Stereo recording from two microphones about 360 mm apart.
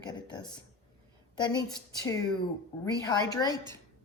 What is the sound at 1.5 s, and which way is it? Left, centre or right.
Speech, centre.